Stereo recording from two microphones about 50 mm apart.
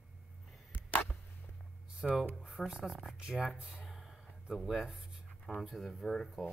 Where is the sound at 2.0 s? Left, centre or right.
Centre; by 3.8 s right.